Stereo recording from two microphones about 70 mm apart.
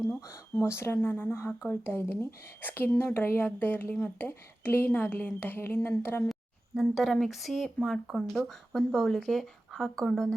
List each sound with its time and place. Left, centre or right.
0.2 s a woman's voice: left
6.7 s a woman's voice: centre